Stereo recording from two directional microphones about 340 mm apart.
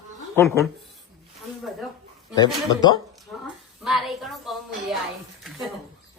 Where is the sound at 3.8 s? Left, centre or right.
Centre.